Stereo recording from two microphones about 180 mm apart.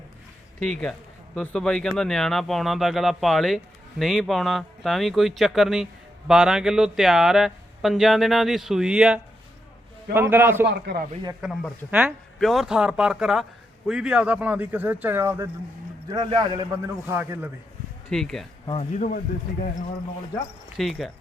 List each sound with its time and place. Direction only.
0.6 s speech: 5° left (ahead or behind); by 10.7 s 10° right (ahead or behind)
10.7 s speech: 65° right (ahead or behind)
11.4 s speech: 5° right (ahead or behind)
12.4 s speech: centre (ahead or behind)
18.1 s speech: 5° left (ahead or behind)
18.6 s speech: 35° left (ahead or behind)
20.7 s speech: centre (ahead or behind)